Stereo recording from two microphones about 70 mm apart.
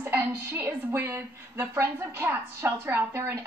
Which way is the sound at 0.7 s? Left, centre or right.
Right.